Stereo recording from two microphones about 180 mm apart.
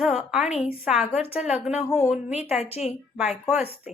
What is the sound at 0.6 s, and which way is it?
A woman's voice, 5° right (ahead or behind).